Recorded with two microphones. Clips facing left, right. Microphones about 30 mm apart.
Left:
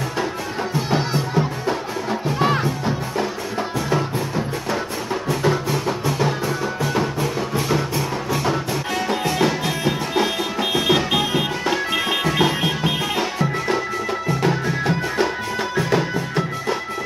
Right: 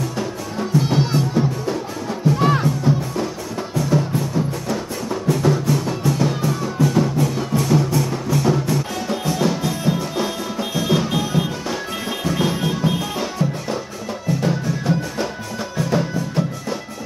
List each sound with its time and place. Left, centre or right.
0.7 s music: centre
1.3 s music: left
5.3 s music: left